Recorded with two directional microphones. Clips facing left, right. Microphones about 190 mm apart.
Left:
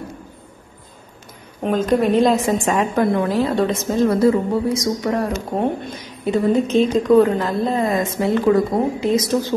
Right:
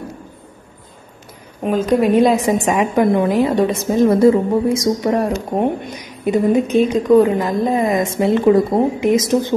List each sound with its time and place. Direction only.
1.6 s a woman's voice: 10° right (ahead or behind)